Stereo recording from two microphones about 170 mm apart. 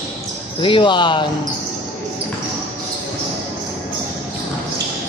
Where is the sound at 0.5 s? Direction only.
30° left (ahead or behind).